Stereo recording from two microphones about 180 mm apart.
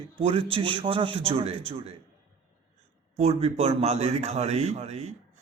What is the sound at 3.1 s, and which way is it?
A man's voice, 35° right (ahead or behind).